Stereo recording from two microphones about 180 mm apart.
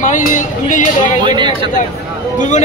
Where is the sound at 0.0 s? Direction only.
45° left (ahead or behind).